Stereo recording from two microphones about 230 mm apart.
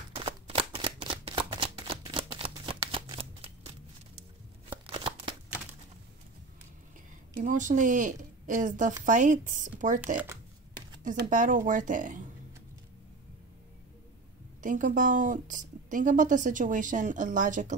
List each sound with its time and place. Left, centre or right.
0.1 s shuffling cards: right
4.6 s shuffling cards: right
7.3 s speech: right
14.6 s speech: right